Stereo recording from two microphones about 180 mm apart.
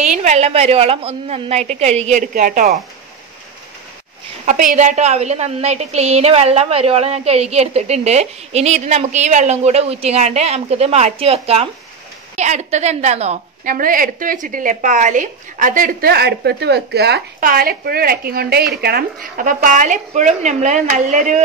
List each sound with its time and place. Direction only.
0.0 s a woman's voice: 40° right (ahead or behind)
4.5 s a woman's voice: 45° right (ahead or behind)
13.7 s speech: 50° right (ahead or behind)